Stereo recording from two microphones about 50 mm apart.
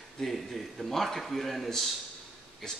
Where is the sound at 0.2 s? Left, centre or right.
Centre.